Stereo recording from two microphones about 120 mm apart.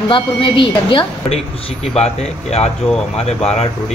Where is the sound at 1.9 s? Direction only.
60° left (ahead or behind).